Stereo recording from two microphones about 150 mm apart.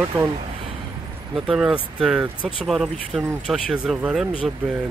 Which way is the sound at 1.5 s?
5° right (ahead or behind).